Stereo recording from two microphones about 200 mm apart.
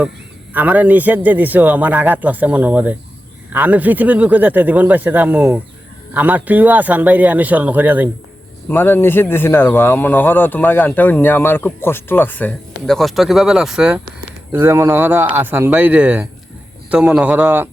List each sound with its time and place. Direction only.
0.5 s a man's voice: 10° right (ahead or behind)
8.7 s a man's voice: 10° left (ahead or behind); by 17.7 s 10° right (ahead or behind)